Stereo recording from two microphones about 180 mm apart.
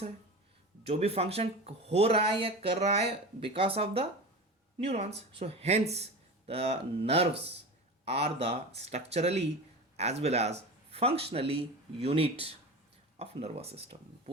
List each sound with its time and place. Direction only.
0.9 s speech: 35° right (ahead or behind)